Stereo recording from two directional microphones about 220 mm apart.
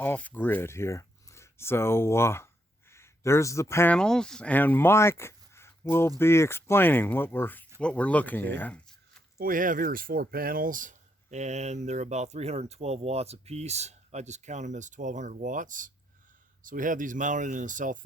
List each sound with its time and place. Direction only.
0.0 s speech: 10° left (ahead or behind)
9.4 s speech: 40° right (ahead or behind)